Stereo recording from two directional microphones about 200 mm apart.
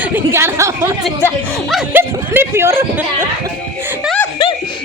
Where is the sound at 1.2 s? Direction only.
Centre (ahead or behind).